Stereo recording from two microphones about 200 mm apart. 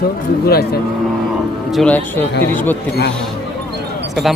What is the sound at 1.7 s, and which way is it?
Speech, 5° left (ahead or behind).